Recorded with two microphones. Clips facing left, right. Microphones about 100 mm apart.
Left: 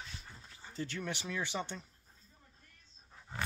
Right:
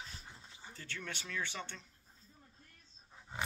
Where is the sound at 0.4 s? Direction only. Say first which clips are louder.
Even; 20° right (ahead or behind).